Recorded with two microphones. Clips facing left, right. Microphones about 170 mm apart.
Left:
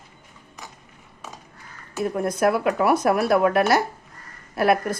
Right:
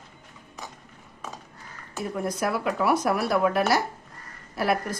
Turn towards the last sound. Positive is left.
turn(degrees=55)  # may be behind; listen again after turning